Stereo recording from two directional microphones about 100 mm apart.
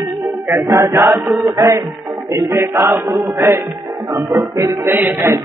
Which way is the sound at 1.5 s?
35° right (ahead or behind).